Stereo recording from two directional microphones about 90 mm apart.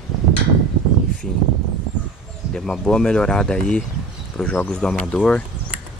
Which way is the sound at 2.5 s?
5° left (ahead or behind).